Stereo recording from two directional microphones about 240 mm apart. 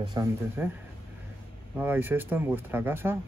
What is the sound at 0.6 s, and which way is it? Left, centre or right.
Speech, centre.